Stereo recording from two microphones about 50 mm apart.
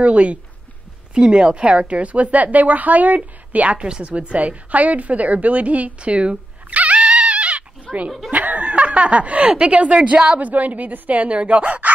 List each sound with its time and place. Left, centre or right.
0.0 s a woman's voice: right
7.9 s speech: centre
8.3 s speech: right
10.4 s speech: right